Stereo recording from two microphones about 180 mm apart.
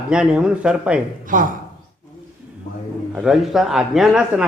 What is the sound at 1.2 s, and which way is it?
Speech, 50° right (ahead or behind).